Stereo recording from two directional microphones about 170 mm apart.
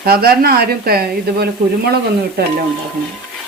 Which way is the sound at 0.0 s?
65° right (ahead or behind).